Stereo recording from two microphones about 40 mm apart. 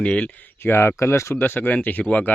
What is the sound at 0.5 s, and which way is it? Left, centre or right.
Speech, left.